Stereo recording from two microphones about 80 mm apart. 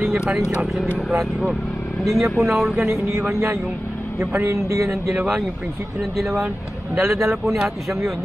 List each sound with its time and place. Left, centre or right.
0.1 s speech: centre
2.0 s speech: centre
2.9 s speech: right
5.1 s speech: centre
7.0 s speech: right
7.5 s speech: centre